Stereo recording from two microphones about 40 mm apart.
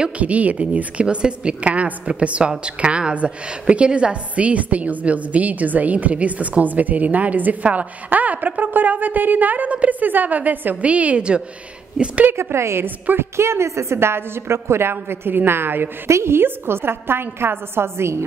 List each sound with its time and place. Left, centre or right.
0.2 s a woman's voice: right
10.8 s a woman's voice: right
12.0 s a woman's voice: centre
12.3 s a woman's voice: right
12.8 s a woman's voice: right
13.2 s a woman's voice: right